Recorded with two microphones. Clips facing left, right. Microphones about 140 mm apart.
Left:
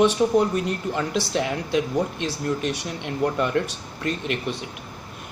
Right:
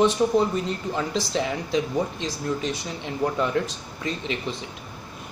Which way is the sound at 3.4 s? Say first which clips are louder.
Left 1 dB; 60° left (ahead or behind).